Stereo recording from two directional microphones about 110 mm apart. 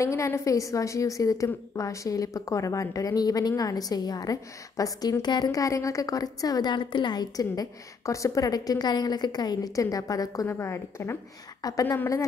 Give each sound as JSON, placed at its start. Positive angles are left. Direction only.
{"t": 0.0, "sound": "a woman's voice", "side_deg": 25}